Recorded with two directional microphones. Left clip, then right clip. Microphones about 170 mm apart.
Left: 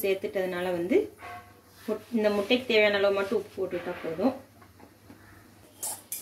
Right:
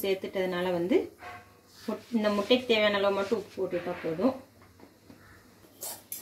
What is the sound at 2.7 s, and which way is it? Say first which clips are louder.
Speech: left 2 dB; 40° right (ahead or behind).